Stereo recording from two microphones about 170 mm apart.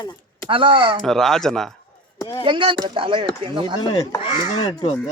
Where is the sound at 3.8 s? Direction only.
25° left (ahead or behind).